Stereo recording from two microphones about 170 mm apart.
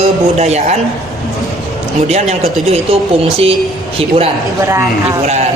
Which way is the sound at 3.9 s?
35° right (ahead or behind).